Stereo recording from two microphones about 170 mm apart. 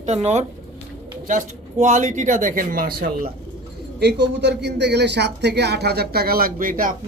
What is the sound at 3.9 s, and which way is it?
Speech, 80° right.